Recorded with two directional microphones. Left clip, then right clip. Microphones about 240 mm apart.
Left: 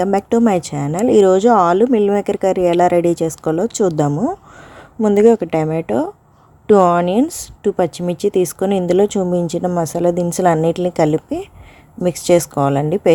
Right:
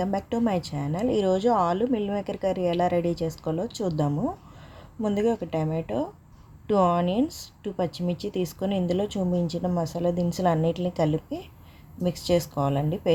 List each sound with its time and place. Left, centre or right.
0.3 s speech: left